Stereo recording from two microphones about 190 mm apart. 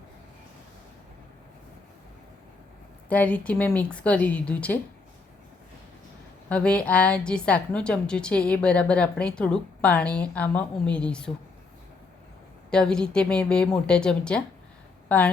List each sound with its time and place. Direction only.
3.1 s a woman's voice: 10° left (ahead or behind)
6.5 s a woman's voice: 5° left (ahead or behind)
12.7 s a woman's voice: 5° left (ahead or behind)